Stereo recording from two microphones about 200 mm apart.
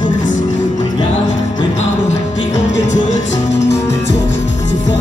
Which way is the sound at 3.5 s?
60° left (ahead or behind).